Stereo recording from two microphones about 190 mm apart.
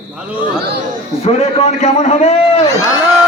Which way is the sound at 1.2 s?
35° left (ahead or behind).